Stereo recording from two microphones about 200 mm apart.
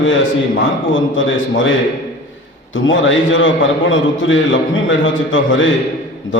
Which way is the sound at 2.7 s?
70° left (ahead or behind).